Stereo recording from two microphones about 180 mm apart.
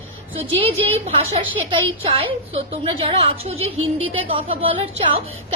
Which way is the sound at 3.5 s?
90° right.